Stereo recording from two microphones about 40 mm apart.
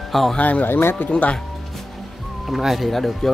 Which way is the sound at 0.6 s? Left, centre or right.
Left.